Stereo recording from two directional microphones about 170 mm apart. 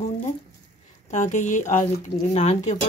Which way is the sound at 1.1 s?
45° left (ahead or behind).